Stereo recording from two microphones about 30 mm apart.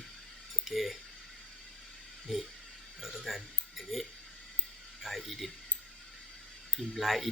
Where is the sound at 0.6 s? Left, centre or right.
Centre.